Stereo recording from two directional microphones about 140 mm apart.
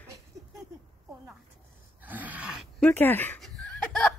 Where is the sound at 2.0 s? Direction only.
10° right (ahead or behind).